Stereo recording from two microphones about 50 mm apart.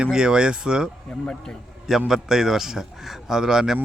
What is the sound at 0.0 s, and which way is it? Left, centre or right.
Speech, centre.